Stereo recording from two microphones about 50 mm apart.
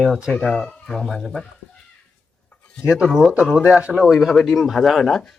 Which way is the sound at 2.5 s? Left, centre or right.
Left.